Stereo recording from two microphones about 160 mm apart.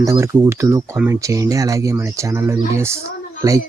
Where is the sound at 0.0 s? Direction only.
20° right (ahead or behind).